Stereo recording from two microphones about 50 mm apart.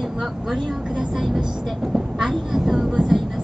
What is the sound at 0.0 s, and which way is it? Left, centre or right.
Speech, centre.